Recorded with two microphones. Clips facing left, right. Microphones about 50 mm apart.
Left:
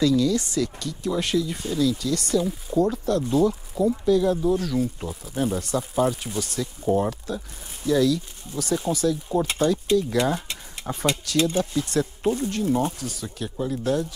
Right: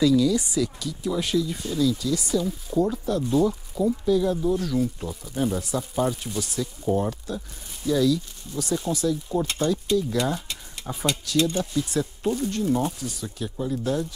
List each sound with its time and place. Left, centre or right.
0.0 s speech: centre
9.5 s speech: centre
11.8 s speech: centre
12.2 s speech: centre
12.4 s speech: centre